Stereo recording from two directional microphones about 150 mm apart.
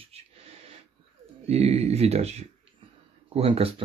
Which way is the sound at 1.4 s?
45° right (ahead or behind).